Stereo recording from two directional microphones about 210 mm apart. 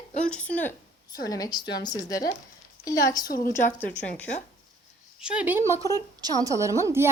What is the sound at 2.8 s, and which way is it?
Speech, 15° left (ahead or behind).